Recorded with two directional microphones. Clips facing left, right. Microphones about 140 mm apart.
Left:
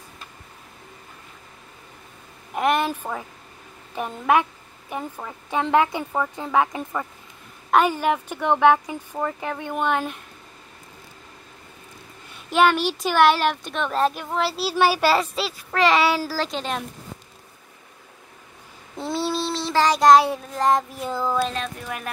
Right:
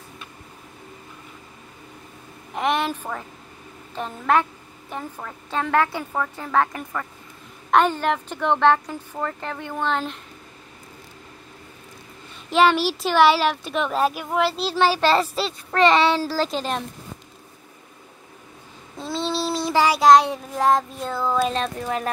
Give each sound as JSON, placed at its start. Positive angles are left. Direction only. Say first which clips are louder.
{"t": 2.5, "sound": "a woman's voice", "louder": "left 1 dB", "side_deg": 5}
{"t": 12.4, "sound": "a child's voice", "louder": "right 1 dB", "side_deg": 0}
{"t": 14.4, "sound": "a child's voice", "louder": "even", "side_deg": 5}
{"t": 18.9, "sound": "child singing", "louder": "left 1 dB", "side_deg": 15}
{"t": 19.3, "sound": "child singing", "louder": "right 4 dB", "side_deg": -10}
{"t": 21.1, "sound": "a woman's voice", "louder": "right 1 dB", "side_deg": 15}
{"t": 21.5, "sound": "speech", "louder": "right 5 dB", "side_deg": -35}